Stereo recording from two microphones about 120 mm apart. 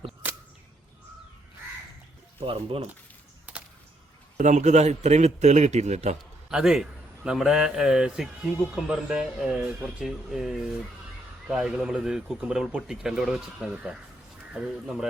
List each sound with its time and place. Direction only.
2.4 s speech: 50° right (ahead or behind)
4.4 s a man's voice: 85° right; by 6.1 s 70° right (ahead or behind)
6.5 s speech: 5° right (ahead or behind)